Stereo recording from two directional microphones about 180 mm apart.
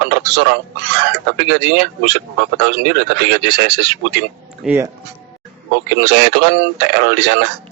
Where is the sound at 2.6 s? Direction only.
65° right (ahead or behind).